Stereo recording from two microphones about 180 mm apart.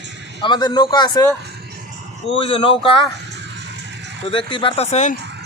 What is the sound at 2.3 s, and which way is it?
Speech, 30° left (ahead or behind).